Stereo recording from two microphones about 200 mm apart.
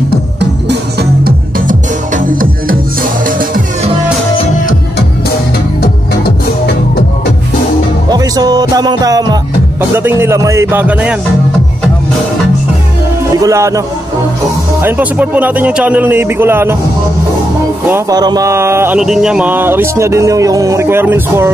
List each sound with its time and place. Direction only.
0.1 s music: 55° right (ahead or behind)
5.8 s music: 55° left (ahead or behind)
8.1 s music: 20° right (ahead or behind)
13.3 s music: 15° right (ahead or behind)
14.8 s speech: 10° right (ahead or behind)
17.8 s speech: 15° right (ahead or behind)